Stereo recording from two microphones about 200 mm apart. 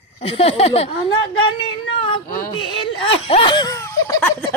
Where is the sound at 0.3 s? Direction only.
30° left (ahead or behind).